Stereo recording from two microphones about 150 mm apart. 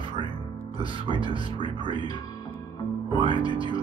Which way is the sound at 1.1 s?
30° left (ahead or behind).